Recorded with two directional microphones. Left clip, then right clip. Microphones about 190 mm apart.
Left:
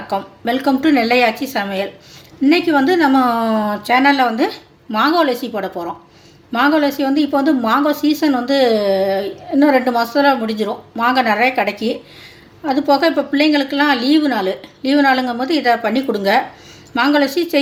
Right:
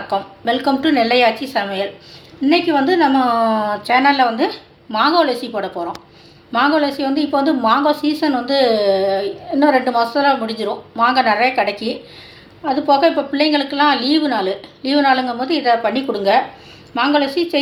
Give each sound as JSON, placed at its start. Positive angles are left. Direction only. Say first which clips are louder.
{"t": 0.1, "sound": "a woman's voice", "louder": "right 1 dB", "side_deg": 55}